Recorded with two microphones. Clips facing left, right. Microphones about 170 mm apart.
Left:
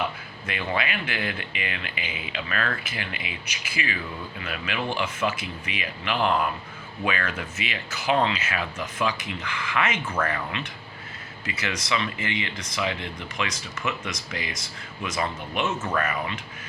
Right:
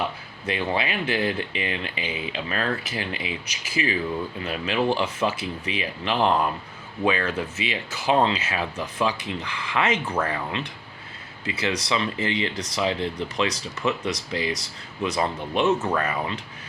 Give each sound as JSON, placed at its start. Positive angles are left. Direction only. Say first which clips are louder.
{"t": 0.4, "sound": "speech", "louder": "right 3 dB", "side_deg": -30}
{"t": 11.4, "sound": "speech", "louder": "right 4 dB", "side_deg": -30}